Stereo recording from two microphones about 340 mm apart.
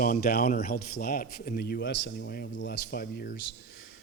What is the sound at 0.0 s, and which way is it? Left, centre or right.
A man's voice, left.